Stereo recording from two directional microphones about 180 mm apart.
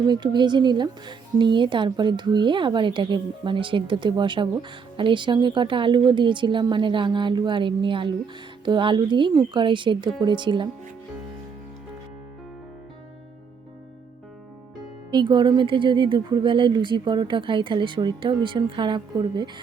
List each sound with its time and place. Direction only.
0.0 s speech: 25° right (ahead or behind)
15.1 s speech: 25° right (ahead or behind)